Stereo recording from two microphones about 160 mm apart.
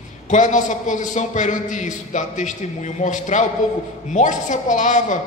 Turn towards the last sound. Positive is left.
turn(degrees=50)  # may be behind; listen again after turning